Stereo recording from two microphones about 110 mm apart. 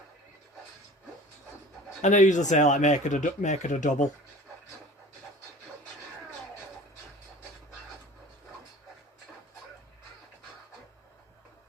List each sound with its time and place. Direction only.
2.0 s speech: 90° left